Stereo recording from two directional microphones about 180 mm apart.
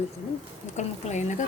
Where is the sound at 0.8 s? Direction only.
40° left (ahead or behind).